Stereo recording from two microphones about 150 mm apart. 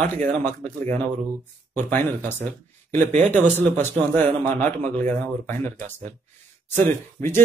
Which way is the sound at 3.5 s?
15° left (ahead or behind).